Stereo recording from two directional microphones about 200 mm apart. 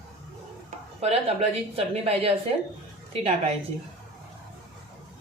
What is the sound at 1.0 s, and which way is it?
Speech, 30° right (ahead or behind).